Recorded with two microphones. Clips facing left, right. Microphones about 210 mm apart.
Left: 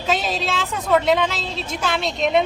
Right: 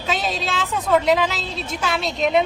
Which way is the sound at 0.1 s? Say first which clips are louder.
Left 2 dB; centre (ahead or behind).